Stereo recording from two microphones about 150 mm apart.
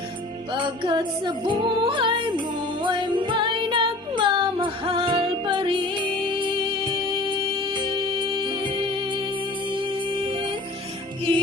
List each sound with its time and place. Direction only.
0.5 s music: 35° right (ahead or behind)